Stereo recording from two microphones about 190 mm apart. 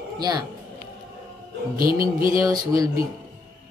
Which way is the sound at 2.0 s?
50° right (ahead or behind).